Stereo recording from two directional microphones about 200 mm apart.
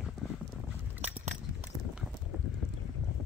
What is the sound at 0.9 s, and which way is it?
Biting, 10° right (ahead or behind).